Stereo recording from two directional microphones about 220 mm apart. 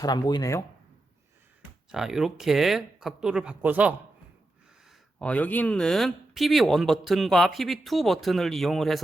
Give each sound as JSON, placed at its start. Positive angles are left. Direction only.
{"t": 0.0, "sound": "speech", "side_deg": 15}
{"t": 1.9, "sound": "speech", "side_deg": 0}
{"t": 4.9, "sound": "speech", "side_deg": 5}